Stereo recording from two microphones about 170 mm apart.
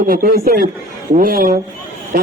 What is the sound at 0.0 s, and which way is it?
Speech, 60° right (ahead or behind).